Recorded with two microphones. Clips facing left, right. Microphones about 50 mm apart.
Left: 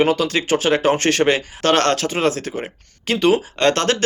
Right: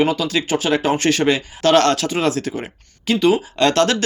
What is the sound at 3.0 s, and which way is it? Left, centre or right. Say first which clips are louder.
Speech: even; left.